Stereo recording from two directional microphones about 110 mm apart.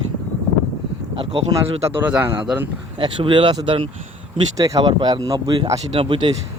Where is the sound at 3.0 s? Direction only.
45° right (ahead or behind).